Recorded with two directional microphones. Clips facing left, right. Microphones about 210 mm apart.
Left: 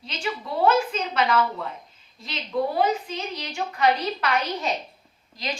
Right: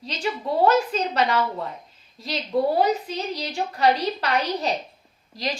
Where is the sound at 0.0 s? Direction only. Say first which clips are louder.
Right 3 dB; 35° right (ahead or behind).